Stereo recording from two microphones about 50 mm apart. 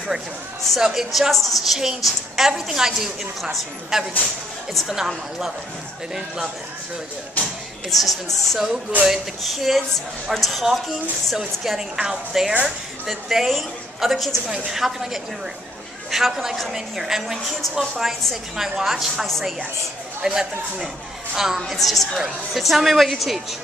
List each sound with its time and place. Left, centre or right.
0.7 s a woman's voice: centre
7.4 s a sound: left
7.9 s a woman's voice: centre
16.1 s a woman's voice: centre